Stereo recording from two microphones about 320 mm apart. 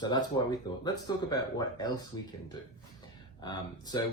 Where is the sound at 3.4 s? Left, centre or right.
Centre.